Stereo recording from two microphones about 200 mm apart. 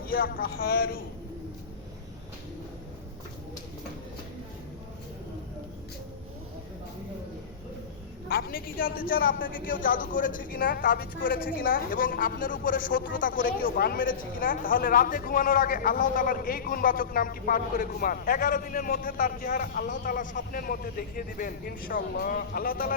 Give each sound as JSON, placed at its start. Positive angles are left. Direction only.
{"t": 0.0, "sound": "speech", "side_deg": 45}
{"t": 8.3, "sound": "speech", "side_deg": 50}